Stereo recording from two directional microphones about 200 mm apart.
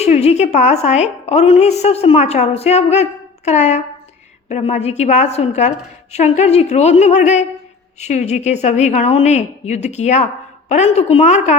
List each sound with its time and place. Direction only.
0.0 s a woman's voice: 30° left (ahead or behind)